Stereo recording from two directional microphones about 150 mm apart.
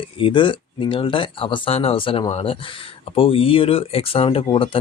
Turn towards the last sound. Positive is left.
turn(degrees=35)  # may be behind; listen again after turning